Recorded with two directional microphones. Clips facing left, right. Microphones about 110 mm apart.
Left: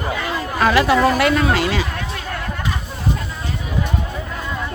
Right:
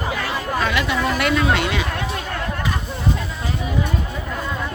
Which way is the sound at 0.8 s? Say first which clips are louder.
Left 5 dB; 35° left (ahead or behind).